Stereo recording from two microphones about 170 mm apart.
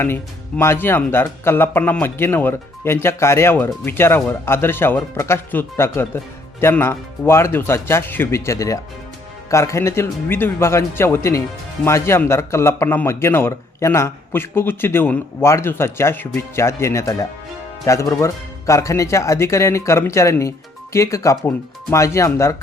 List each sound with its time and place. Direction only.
0.0 s a man's voice: 15° left (ahead or behind)